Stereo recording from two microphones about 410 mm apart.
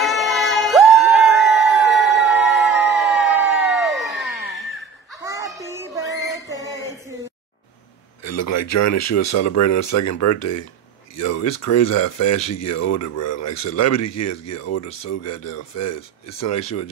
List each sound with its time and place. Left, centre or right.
0.0 s a sound: centre
5.2 s child singing: centre
8.2 s speech: left